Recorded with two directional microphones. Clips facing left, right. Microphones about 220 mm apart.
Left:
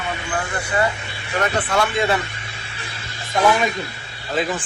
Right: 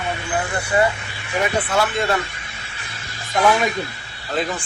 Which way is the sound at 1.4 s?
5° right (ahead or behind).